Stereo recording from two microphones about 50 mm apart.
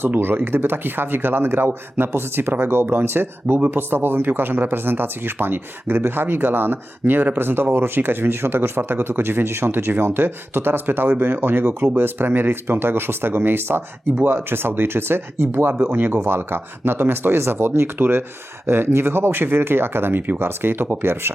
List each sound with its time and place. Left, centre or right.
0.2 s speech: right